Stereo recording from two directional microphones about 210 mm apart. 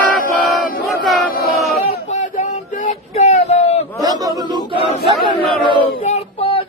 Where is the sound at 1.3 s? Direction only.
45° left (ahead or behind).